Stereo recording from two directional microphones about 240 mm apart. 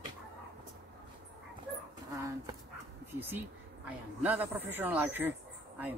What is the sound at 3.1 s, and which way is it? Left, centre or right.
Speech, centre.